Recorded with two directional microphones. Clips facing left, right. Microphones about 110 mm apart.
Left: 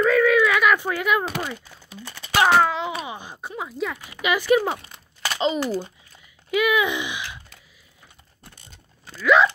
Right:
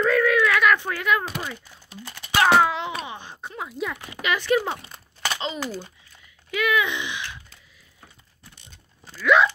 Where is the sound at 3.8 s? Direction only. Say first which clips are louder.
Left 2 dB; 5° left (ahead or behind).